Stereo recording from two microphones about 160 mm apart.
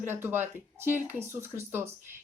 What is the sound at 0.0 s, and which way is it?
Speech, 15° right (ahead or behind).